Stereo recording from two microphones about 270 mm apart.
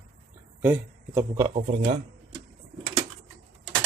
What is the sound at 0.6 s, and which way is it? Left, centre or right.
Speech, centre.